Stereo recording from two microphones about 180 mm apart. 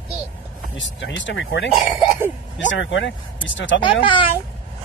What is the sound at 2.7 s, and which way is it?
Speech, 90° left.